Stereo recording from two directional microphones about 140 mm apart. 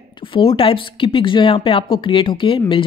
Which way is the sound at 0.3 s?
40° left (ahead or behind).